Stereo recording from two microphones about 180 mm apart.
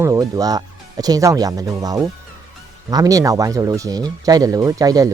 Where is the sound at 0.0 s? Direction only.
20° right (ahead or behind).